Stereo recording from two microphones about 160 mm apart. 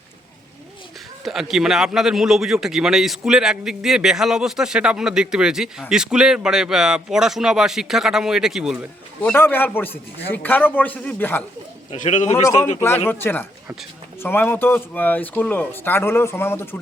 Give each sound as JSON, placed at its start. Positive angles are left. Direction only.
{"t": 1.2, "sound": "a man's voice", "side_deg": 0}
{"t": 9.2, "sound": "speech", "side_deg": 10}
{"t": 11.9, "sound": "a man's voice", "side_deg": 50}
{"t": 13.1, "sound": "speech", "side_deg": 15}